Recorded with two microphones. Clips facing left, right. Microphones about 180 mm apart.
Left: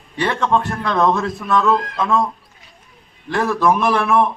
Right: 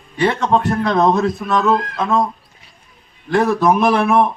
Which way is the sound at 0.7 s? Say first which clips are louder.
Right 3 dB; 20° right (ahead or behind).